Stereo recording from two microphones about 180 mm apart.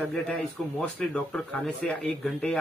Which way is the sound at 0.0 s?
5° left (ahead or behind).